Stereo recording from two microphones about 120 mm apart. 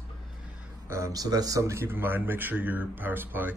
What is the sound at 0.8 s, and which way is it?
Speech, 25° right (ahead or behind).